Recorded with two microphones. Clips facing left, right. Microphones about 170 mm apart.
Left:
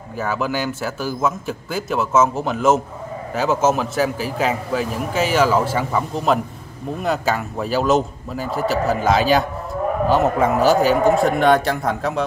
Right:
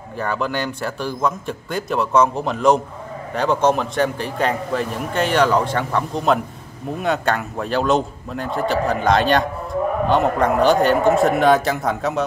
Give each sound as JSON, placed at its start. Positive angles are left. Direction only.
{"t": 0.2, "sound": "a man's voice", "side_deg": 5}